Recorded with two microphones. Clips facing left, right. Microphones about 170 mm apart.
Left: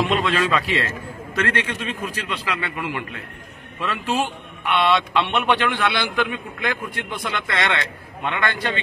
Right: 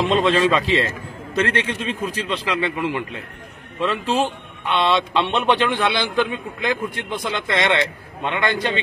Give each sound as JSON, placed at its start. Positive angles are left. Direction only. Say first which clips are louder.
{"t": 0.1, "sound": "a man's voice", "louder": "right 4 dB", "side_deg": -25}